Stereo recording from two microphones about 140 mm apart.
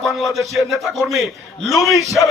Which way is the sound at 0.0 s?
Centre (ahead or behind).